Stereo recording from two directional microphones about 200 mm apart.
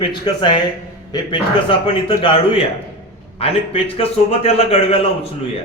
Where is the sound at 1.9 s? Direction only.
25° left (ahead or behind).